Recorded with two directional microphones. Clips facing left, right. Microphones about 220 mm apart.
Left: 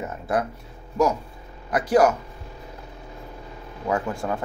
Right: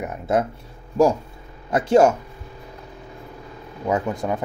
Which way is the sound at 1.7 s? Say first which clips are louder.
Right 3 dB; 25° right (ahead or behind).